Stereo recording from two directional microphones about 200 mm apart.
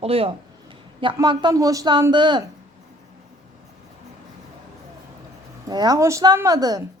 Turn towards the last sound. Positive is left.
turn(degrees=-20)  # may be behind; listen again after turning